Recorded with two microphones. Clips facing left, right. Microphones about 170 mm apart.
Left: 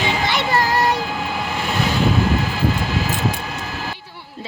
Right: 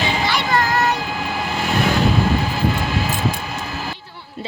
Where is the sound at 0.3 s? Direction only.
25° left (ahead or behind).